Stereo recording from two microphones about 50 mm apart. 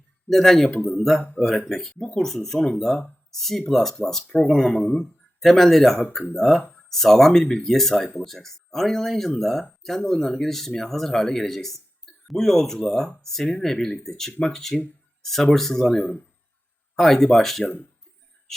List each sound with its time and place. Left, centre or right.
0.3 s speech: centre
16.0 s speech: centre
16.9 s speech: centre